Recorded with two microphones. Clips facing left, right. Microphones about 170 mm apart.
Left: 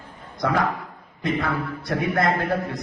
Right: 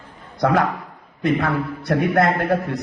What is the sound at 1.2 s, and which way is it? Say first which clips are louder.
A man's voice: right 5 dB; 65° right (ahead or behind).